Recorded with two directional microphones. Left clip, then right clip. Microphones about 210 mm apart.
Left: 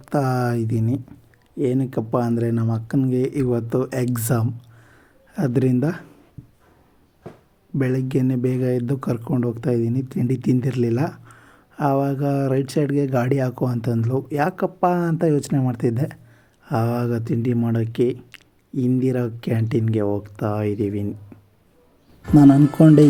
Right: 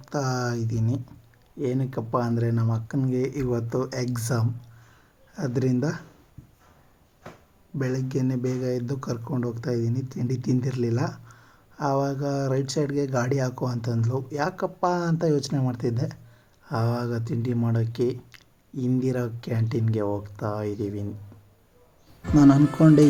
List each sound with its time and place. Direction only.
0.0 s speech: 25° left (ahead or behind)
7.8 s speech: 20° left (ahead or behind)
22.8 s speech: 15° left (ahead or behind)